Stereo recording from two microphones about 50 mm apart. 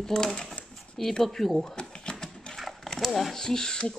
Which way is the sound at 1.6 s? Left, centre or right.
Centre.